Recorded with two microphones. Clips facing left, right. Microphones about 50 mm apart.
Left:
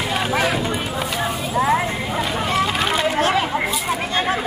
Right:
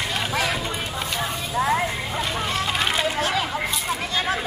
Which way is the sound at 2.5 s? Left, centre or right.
Centre.